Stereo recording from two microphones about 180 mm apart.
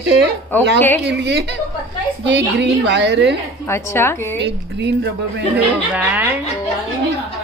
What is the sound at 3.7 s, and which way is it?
Speech, 15° left (ahead or behind).